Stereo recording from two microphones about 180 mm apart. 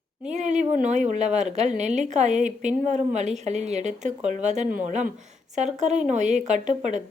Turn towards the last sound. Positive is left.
turn(degrees=-40)  # may be behind; listen again after turning